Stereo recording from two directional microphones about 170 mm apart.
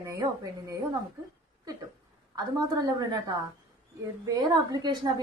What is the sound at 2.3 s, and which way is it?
A woman's voice, 20° right (ahead or behind).